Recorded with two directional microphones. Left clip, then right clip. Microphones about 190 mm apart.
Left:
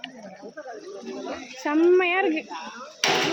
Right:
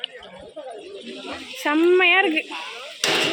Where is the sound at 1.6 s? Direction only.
Centre (ahead or behind).